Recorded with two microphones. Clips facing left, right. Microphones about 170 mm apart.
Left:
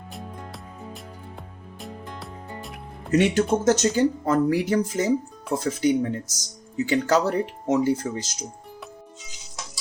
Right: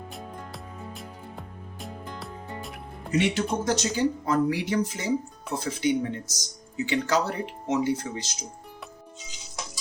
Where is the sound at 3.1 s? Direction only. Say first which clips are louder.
Left 5 dB; 45° left (ahead or behind).